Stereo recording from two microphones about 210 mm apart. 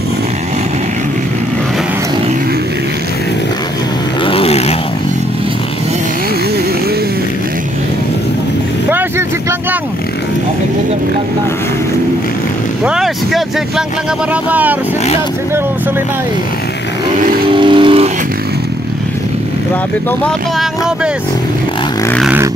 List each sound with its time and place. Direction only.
4.3 s vehicle: 25° left (ahead or behind)
12.8 s vehicle: centre (ahead or behind)
14.3 s speech: 5° right (ahead or behind)
17.2 s vehicle: 40° right (ahead or behind)
17.5 s vehicle: 25° right (ahead or behind)
20.2 s speech: centre (ahead or behind)